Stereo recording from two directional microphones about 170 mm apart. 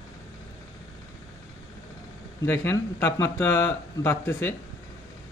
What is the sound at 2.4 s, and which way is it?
Speech, 15° left (ahead or behind).